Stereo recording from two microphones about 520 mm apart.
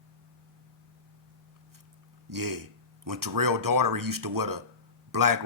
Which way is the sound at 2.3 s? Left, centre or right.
Right.